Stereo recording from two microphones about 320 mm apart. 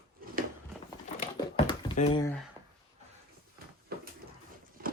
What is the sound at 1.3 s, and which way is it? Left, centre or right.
Typing, centre.